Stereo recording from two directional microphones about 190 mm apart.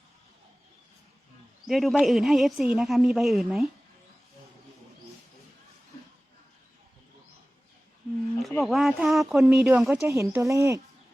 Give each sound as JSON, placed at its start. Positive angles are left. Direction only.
{"t": 1.6, "sound": "speech", "side_deg": 0}
{"t": 8.4, "sound": "speech", "side_deg": 0}
{"t": 10.0, "sound": "speech", "side_deg": -15}